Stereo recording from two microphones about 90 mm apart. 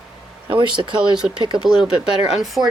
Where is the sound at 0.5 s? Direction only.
60° right (ahead or behind).